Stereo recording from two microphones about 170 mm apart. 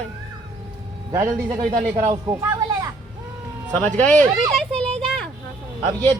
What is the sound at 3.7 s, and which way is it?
Speech, 10° left (ahead or behind).